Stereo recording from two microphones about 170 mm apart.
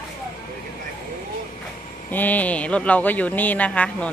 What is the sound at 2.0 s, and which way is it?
Speech, 10° left (ahead or behind).